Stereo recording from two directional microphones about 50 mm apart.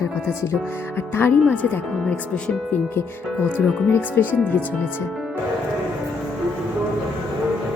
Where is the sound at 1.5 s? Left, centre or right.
Left.